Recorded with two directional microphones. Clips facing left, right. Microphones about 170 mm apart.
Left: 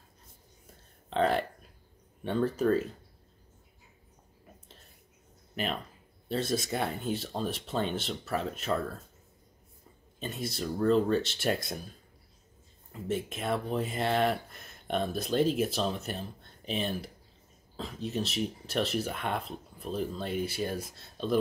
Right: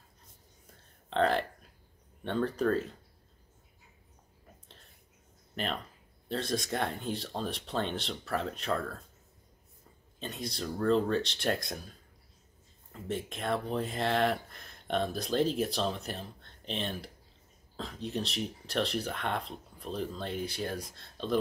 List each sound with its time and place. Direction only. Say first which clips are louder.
1.1 s speech: left 1 dB; 5° left (ahead or behind)
5.5 s speech: left 2 dB; 5° left (ahead or behind)
10.1 s speech: left 2 dB; 5° left (ahead or behind)
13.1 s speech: left 1 dB; 5° left (ahead or behind)